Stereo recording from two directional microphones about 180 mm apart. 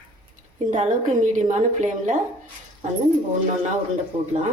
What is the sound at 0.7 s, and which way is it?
A woman's voice, 45° right (ahead or behind).